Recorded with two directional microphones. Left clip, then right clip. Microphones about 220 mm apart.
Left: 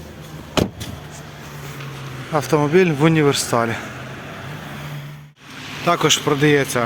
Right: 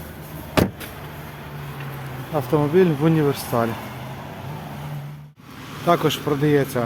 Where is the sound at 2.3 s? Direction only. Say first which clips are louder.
Left 3 dB; 15° left (ahead or behind).